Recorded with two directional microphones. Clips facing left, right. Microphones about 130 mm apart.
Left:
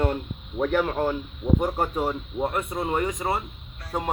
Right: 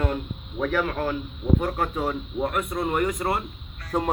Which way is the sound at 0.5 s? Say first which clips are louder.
Left 2 dB; 30° left (ahead or behind).